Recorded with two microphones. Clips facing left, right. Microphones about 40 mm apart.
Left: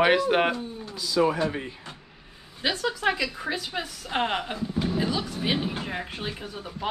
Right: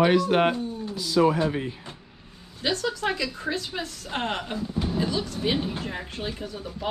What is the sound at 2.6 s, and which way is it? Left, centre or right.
A woman's voice, centre.